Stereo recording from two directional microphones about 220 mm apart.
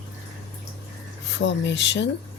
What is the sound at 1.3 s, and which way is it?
Speech, 55° left (ahead or behind).